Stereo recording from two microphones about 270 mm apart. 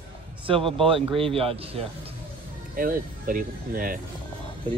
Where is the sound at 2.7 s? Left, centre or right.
Right.